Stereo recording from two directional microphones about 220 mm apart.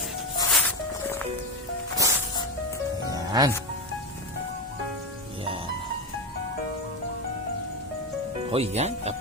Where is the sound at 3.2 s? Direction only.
20° right (ahead or behind).